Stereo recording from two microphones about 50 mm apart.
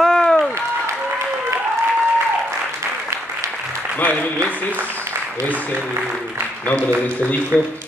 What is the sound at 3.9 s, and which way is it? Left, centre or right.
Applause, left.